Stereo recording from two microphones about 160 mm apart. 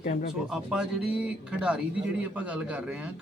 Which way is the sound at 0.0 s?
55° left (ahead or behind).